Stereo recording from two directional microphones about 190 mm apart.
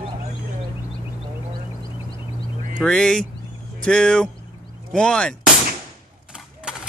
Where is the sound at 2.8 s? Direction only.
5° left (ahead or behind).